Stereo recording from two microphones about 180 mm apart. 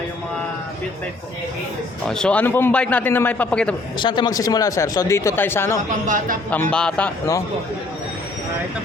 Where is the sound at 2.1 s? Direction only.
5° left (ahead or behind).